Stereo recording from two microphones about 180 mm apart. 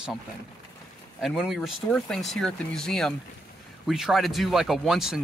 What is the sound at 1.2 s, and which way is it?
Speech, centre (ahead or behind).